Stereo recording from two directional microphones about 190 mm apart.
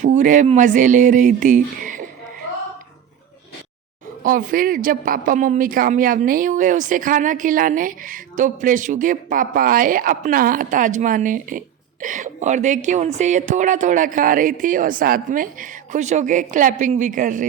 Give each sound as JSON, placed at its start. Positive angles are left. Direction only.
{"t": 0.0, "sound": "speech", "side_deg": -40}
{"t": 4.2, "sound": "a woman's voice", "side_deg": -45}